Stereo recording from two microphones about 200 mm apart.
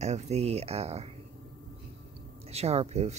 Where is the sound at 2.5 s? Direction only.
30° right (ahead or behind).